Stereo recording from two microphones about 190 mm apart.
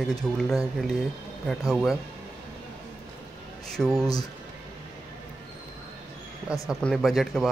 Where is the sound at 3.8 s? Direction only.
Centre (ahead or behind).